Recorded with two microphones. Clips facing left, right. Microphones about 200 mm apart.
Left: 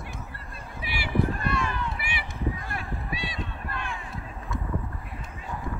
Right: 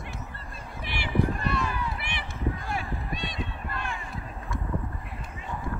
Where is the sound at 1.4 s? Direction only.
Centre (ahead or behind).